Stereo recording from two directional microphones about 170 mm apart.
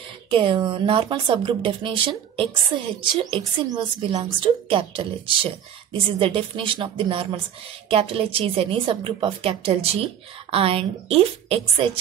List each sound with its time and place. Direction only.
0.3 s speech: 30° right (ahead or behind)